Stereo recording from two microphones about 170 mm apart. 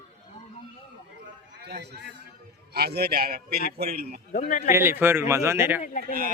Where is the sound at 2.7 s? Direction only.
70° right (ahead or behind).